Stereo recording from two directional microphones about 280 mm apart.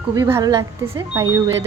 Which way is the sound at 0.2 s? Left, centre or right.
Centre.